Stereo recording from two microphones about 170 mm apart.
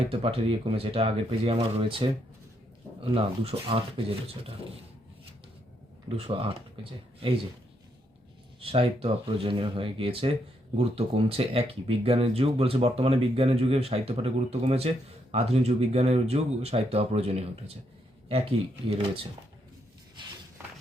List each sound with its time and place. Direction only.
0.1 s speech: 35° right (ahead or behind)
3.2 s speech: 35° right (ahead or behind)
6.1 s speech: 35° right (ahead or behind)
8.6 s speech: 35° right (ahead or behind)
18.9 s speech: 35° right (ahead or behind)